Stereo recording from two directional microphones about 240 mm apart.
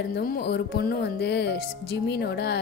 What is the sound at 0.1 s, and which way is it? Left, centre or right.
A woman's voice, left.